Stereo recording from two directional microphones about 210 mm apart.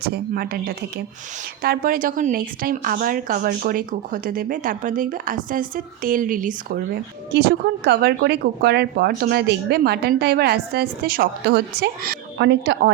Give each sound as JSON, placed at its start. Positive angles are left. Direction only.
{"t": 0.0, "sound": "a woman's voice", "side_deg": -45}
{"t": 7.9, "sound": "speech", "side_deg": -50}